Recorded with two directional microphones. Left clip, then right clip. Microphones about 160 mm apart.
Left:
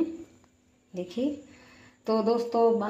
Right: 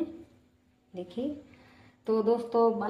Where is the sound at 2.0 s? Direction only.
40° left (ahead or behind).